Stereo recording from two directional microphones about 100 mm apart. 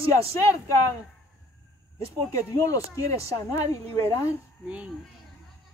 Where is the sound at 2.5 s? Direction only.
35° left (ahead or behind).